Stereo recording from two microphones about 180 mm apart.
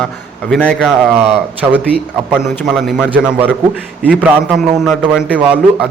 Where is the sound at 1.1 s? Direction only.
35° right (ahead or behind).